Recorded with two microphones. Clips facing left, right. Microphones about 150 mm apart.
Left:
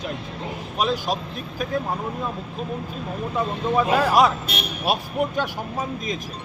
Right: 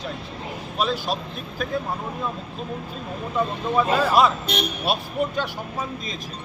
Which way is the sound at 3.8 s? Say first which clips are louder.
Left 1 dB; 10° left (ahead or behind).